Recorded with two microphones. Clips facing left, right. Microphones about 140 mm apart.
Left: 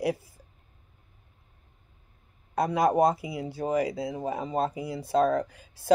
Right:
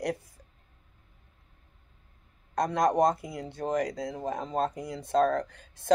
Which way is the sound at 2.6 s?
5° left (ahead or behind).